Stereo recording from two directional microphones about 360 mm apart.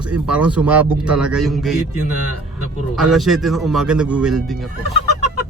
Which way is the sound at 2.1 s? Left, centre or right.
Right.